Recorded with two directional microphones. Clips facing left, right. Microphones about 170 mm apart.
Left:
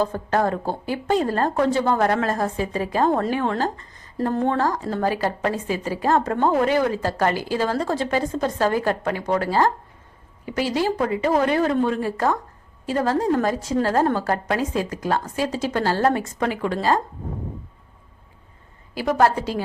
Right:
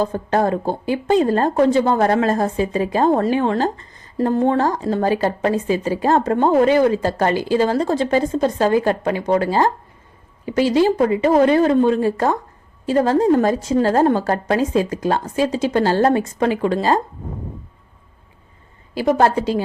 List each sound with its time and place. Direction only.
0.0 s a woman's voice: 20° right (ahead or behind)
19.1 s a woman's voice: 20° right (ahead or behind)